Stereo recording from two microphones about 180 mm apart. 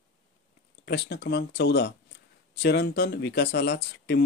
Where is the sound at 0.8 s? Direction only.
65° left (ahead or behind).